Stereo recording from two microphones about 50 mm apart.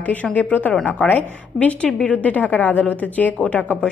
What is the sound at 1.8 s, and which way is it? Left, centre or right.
A woman's voice, left.